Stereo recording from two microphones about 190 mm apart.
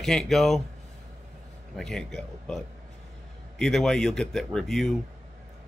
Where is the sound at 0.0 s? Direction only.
Centre (ahead or behind).